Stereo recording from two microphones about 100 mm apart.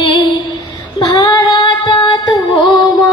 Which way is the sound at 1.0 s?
60° left (ahead or behind).